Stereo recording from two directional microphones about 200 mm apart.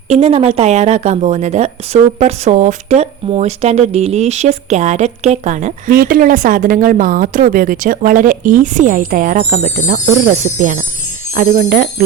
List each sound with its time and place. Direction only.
0.1 s speech: 30° right (ahead or behind)